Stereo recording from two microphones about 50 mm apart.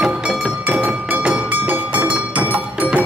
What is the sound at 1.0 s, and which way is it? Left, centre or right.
Music, right.